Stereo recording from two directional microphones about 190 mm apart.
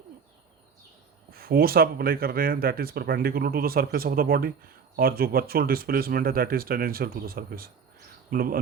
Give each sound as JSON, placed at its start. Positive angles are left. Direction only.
{"t": 1.3, "sound": "speech", "side_deg": -50}